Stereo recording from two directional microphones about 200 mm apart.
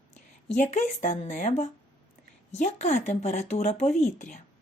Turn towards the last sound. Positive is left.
turn(degrees=35)  # may be behind; listen again after turning